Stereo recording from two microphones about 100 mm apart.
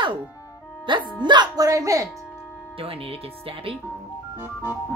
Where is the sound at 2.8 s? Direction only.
70° right (ahead or behind).